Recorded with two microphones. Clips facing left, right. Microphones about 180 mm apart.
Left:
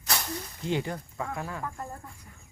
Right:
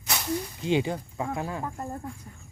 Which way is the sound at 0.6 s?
20° right (ahead or behind).